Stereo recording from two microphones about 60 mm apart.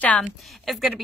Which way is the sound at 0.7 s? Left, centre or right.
Centre.